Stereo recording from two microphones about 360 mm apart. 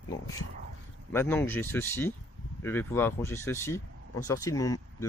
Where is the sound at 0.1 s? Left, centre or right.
Centre.